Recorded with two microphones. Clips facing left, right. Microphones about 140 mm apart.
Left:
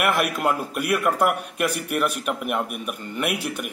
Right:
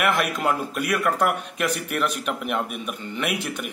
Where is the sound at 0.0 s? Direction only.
10° left (ahead or behind).